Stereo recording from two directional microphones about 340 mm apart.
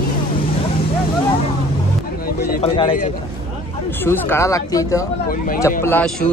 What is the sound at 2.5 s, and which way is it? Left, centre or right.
A man's voice, centre.